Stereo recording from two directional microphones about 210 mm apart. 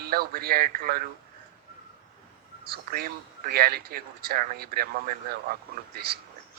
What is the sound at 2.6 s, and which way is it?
Speech, 45° right (ahead or behind).